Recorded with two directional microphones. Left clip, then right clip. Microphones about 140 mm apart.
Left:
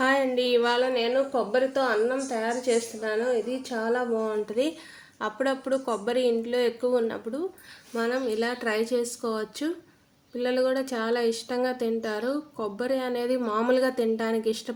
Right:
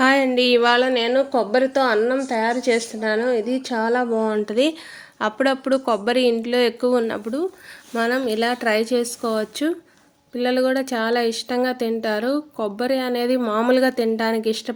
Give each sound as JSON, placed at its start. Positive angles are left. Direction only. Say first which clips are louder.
{"t": 0.0, "sound": "a woman's voice", "louder": "right 7 dB", "side_deg": -30}